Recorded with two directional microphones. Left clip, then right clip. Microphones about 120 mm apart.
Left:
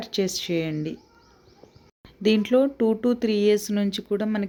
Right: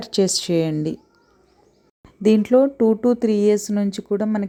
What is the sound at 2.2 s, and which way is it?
Speech, 40° right (ahead or behind).